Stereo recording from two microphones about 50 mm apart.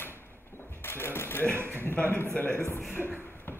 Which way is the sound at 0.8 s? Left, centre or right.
Left.